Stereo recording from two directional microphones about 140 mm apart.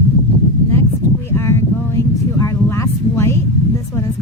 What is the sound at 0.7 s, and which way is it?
A woman's voice, 20° left (ahead or behind).